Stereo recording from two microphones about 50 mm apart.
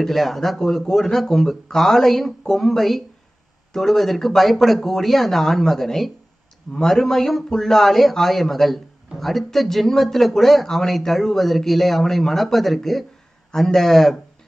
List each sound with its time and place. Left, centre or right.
0.0 s a man's voice: centre